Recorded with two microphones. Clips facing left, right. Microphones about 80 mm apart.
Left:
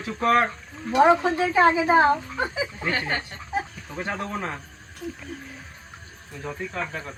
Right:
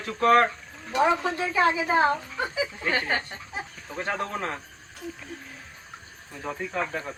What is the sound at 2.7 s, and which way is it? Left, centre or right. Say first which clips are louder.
Speech: right 1 dB; centre.